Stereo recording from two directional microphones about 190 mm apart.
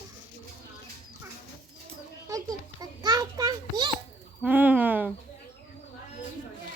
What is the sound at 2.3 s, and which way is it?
Children playing, 20° right (ahead or behind).